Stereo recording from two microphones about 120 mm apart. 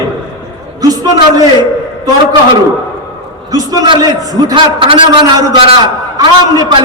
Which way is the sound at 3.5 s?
35° right (ahead or behind).